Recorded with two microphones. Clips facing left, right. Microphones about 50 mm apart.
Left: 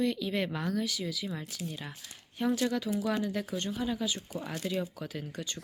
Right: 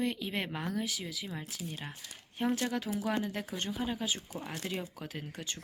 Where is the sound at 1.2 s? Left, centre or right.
Centre.